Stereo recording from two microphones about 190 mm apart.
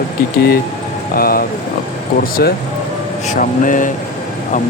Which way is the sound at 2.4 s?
55° left (ahead or behind).